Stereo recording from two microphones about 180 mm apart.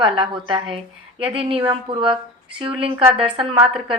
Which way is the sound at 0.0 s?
25° right (ahead or behind).